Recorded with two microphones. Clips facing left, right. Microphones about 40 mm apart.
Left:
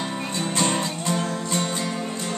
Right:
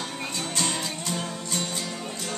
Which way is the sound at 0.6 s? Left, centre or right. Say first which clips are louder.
Left 6 dB; left.